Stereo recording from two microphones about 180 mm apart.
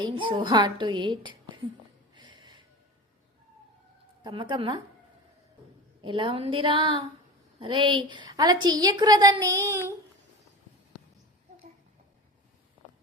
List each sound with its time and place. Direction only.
0.0 s a woman's voice: 25° right (ahead or behind)
2.1 s a sound: 25° right (ahead or behind)
4.2 s a woman's voice: 25° right (ahead or behind)
6.0 s a woman's voice: 30° right (ahead or behind)